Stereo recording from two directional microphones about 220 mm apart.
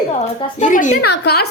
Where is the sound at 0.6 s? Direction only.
35° left (ahead or behind).